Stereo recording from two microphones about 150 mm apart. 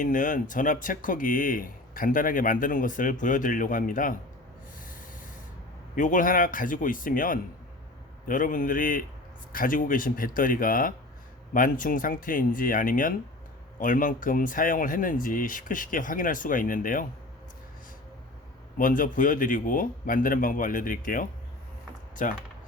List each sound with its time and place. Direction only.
0.0 s speech: 60° left (ahead or behind)
6.0 s speech: 60° left (ahead or behind)
18.8 s speech: 65° left (ahead or behind)